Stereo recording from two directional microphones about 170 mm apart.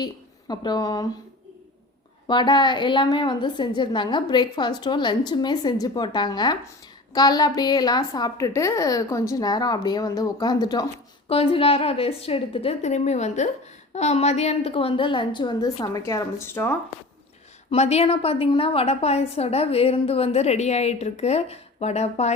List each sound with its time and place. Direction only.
0.0 s a woman's voice: 25° left (ahead or behind)
2.2 s a woman's voice: 25° left (ahead or behind)
11.3 s a woman's voice: 35° left (ahead or behind); by 16.7 s 15° left (ahead or behind)
17.7 s a woman's voice: 40° left (ahead or behind)